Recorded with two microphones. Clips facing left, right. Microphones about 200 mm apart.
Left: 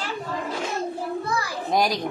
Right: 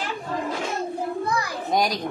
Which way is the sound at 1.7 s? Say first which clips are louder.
Left 1 dB; centre (ahead or behind).